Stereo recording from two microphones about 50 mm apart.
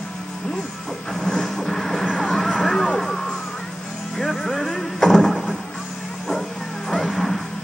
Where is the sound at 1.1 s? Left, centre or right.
Centre.